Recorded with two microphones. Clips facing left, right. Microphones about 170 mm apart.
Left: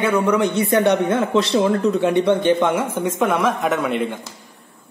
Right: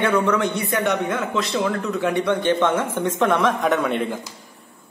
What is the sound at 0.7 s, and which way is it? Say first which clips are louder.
A man's voice: left 5 dB; 30° left (ahead or behind).